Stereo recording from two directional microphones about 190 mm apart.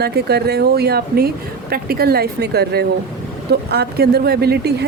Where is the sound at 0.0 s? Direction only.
55° right (ahead or behind).